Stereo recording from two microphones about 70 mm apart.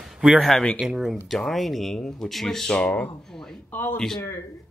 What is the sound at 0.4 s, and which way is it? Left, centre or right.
Speech, centre.